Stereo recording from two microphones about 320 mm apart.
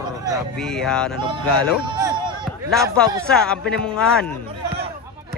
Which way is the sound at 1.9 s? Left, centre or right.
Centre.